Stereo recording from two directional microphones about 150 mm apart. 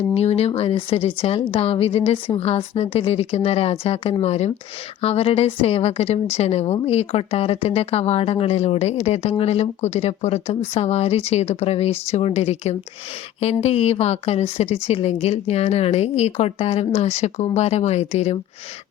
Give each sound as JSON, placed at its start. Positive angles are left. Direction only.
{"t": 0.1, "sound": "speech", "side_deg": 45}